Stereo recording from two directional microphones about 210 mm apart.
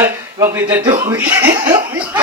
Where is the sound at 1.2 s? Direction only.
10° right (ahead or behind).